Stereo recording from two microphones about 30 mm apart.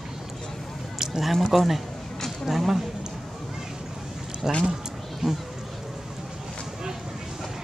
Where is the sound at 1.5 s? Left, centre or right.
Centre.